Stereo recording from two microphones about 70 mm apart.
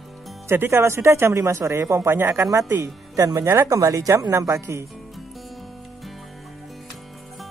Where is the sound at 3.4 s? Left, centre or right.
Right.